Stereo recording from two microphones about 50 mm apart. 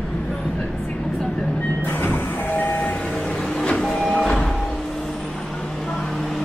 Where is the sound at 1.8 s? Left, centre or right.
Left.